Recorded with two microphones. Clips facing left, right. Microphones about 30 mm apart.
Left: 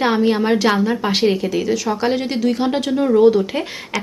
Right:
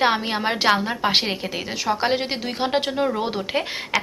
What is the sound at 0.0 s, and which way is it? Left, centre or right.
A woman's voice, right.